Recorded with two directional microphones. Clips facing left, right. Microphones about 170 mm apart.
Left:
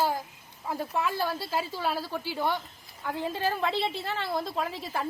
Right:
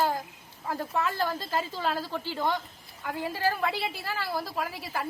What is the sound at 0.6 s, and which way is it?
Speech, 15° left (ahead or behind).